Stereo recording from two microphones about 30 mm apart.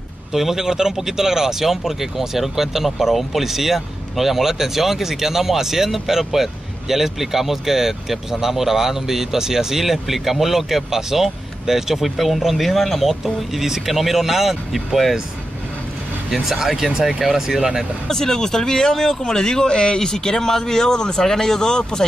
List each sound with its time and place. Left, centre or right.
0.3 s speech: centre
16.5 s speech: centre
18.0 s speech: centre